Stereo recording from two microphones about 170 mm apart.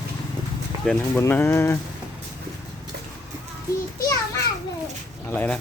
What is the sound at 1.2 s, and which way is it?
Speech, 15° left (ahead or behind).